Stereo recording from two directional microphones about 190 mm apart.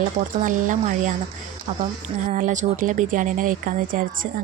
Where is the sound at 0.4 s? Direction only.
40° right (ahead or behind).